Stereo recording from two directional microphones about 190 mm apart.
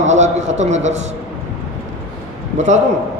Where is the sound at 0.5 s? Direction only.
35° right (ahead or behind).